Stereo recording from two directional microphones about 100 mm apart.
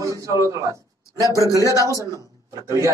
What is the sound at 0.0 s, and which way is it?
Speech, 35° right (ahead or behind).